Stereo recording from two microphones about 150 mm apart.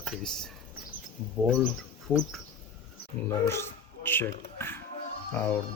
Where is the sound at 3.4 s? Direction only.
15° left (ahead or behind).